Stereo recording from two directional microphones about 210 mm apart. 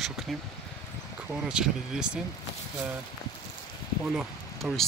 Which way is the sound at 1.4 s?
5° right (ahead or behind).